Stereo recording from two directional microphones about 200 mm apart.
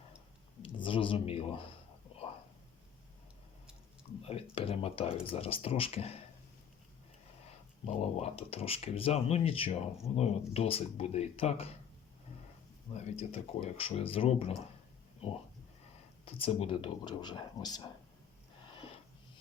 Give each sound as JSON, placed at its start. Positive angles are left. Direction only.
{"t": 0.6, "sound": "a sound", "side_deg": 25}
{"t": 4.2, "sound": "speech", "side_deg": 30}
{"t": 7.9, "sound": "speech", "side_deg": 30}
{"t": 13.0, "sound": "speech", "side_deg": 30}
{"t": 16.2, "sound": "speech", "side_deg": 30}